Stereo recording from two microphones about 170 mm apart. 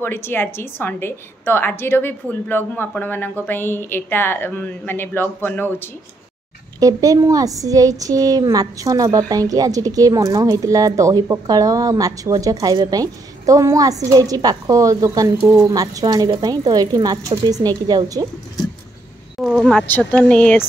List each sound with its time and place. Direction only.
0.0 s a woman's voice: 15° left (ahead or behind)
6.8 s a woman's voice: 20° right (ahead or behind)
19.4 s a woman's voice: 5° left (ahead or behind)